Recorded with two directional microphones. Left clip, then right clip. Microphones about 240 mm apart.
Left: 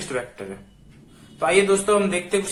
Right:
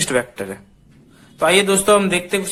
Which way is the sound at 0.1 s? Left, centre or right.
Right.